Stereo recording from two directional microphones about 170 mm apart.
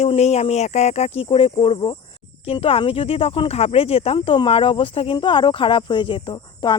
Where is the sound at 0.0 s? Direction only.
40° left (ahead or behind).